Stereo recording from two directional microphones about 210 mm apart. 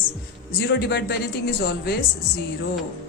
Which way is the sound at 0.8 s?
50° left (ahead or behind).